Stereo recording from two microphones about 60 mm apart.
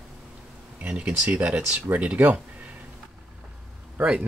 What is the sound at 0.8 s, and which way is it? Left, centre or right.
Speech, right.